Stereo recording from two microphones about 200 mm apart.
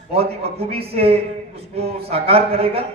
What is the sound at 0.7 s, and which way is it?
A man's voice, 30° right (ahead or behind).